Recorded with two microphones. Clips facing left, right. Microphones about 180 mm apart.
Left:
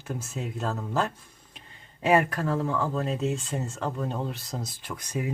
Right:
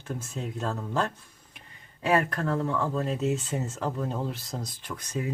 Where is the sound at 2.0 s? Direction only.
15° left (ahead or behind).